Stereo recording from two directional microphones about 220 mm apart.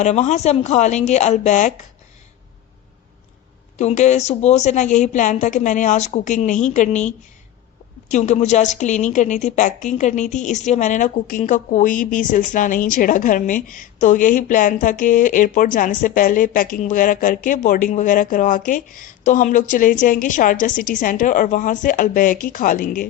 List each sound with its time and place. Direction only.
0.0 s a woman's voice: 30° left (ahead or behind)
3.8 s a woman's voice: 35° left (ahead or behind)